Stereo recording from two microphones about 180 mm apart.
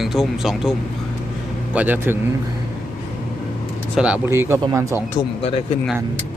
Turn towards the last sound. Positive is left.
turn(degrees=35)  # may be behind; listen again after turning